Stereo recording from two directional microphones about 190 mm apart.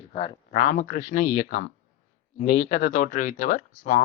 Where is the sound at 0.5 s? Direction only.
40° left (ahead or behind).